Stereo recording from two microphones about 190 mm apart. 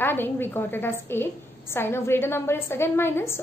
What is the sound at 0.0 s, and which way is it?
A woman's voice, 10° left (ahead or behind).